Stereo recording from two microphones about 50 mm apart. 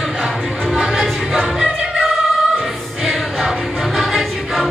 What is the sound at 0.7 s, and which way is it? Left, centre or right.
Music, centre.